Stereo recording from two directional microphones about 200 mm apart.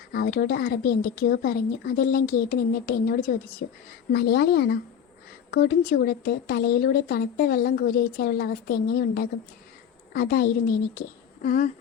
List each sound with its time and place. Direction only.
0.1 s a woman's voice: 50° left (ahead or behind)